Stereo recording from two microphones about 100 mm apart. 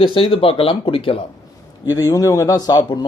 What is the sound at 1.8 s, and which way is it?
A man's voice, 40° left (ahead or behind).